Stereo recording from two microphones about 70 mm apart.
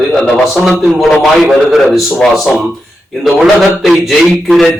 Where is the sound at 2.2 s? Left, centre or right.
Centre.